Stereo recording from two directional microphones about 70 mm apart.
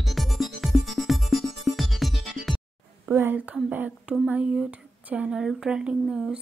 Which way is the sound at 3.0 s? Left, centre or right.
Right.